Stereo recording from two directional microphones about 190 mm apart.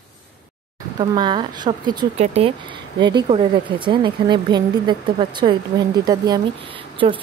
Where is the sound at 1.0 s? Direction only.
25° right (ahead or behind).